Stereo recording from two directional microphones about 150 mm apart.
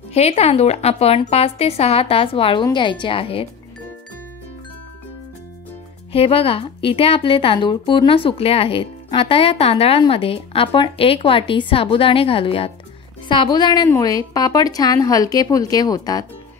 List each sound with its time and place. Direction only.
0.1 s a woman's voice: 45° left (ahead or behind)
6.1 s a woman's voice: 40° left (ahead or behind)